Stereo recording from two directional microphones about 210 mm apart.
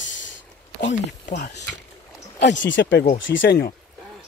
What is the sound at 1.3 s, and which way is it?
Speech, 50° left (ahead or behind).